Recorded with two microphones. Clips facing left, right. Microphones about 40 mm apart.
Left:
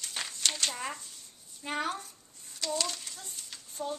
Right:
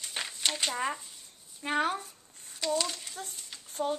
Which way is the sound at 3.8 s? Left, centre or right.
Right.